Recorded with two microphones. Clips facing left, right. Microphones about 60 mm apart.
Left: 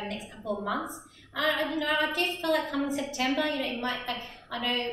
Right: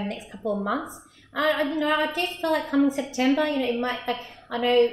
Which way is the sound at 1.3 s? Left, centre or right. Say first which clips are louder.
Right 5 dB; right.